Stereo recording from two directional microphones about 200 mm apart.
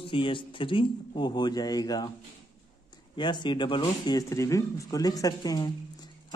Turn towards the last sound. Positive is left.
turn(degrees=20)  # may be behind; listen again after turning